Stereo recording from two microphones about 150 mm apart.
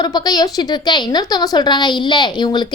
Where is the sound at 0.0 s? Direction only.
25° left (ahead or behind).